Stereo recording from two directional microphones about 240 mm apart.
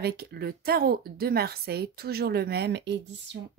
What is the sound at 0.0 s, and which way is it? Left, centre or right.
Speech, right.